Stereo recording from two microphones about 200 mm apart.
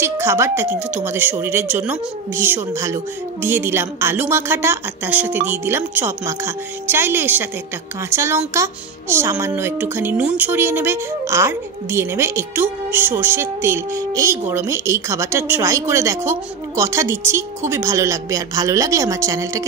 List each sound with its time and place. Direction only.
0.0 s speech: 10° right (ahead or behind)